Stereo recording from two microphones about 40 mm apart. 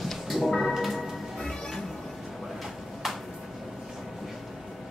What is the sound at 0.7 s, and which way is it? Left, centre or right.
Music, centre.